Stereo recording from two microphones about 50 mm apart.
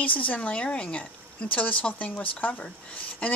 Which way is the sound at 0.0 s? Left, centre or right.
Left.